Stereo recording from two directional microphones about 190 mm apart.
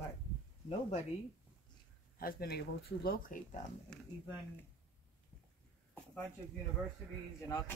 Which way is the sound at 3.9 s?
5° left (ahead or behind).